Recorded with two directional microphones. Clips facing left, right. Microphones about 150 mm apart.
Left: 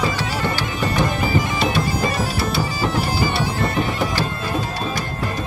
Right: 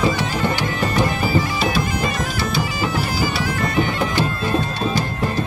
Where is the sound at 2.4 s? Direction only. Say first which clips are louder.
Even; centre (ahead or behind).